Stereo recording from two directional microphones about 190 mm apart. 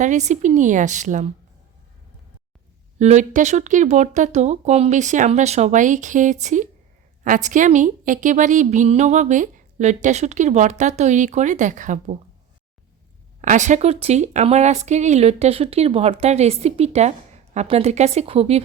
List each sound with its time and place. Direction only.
0.0 s speech: 40° right (ahead or behind)
3.0 s speech: 40° right (ahead or behind)
13.4 s speech: 40° right (ahead or behind)